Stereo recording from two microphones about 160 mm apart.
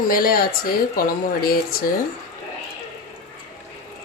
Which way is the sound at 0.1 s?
65° left (ahead or behind).